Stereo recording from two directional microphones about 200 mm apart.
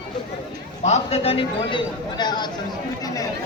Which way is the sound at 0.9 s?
30° left (ahead or behind).